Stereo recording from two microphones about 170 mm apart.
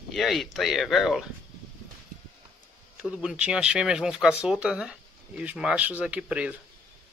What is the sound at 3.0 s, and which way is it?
Speech, 5° right (ahead or behind).